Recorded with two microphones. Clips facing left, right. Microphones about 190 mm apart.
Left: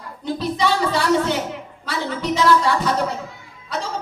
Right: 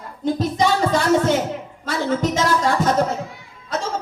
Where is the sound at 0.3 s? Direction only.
45° right (ahead or behind).